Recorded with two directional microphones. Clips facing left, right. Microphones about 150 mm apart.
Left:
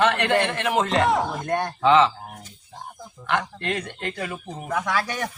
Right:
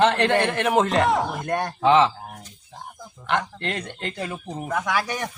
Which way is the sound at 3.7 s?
25° right (ahead or behind).